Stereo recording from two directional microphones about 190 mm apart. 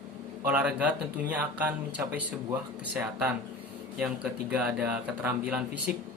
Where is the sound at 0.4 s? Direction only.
5° right (ahead or behind).